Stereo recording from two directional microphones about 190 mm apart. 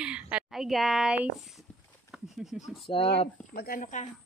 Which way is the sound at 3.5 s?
50° left (ahead or behind).